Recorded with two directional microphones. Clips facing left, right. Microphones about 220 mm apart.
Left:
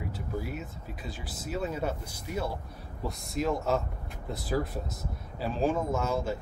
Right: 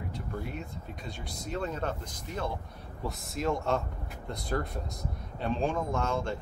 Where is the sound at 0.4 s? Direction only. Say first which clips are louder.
Left 1 dB; 5° left (ahead or behind).